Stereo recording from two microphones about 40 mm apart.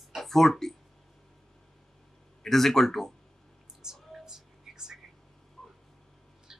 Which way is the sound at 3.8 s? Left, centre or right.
Centre.